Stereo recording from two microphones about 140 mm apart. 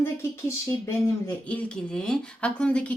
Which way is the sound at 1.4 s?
5° left (ahead or behind).